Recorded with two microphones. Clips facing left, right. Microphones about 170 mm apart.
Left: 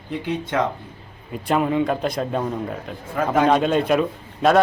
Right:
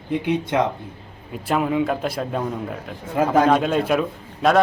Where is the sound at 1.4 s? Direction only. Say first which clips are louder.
Left 1 dB; 5° right (ahead or behind).